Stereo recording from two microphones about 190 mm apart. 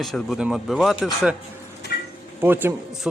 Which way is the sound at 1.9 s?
55° left (ahead or behind).